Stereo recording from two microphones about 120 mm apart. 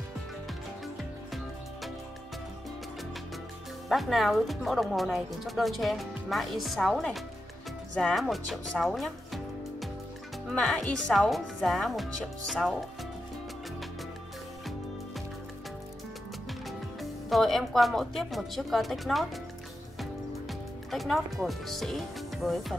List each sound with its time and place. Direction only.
3.9 s speech: centre (ahead or behind)
16.6 s speech: centre (ahead or behind)
20.0 s music: centre (ahead or behind)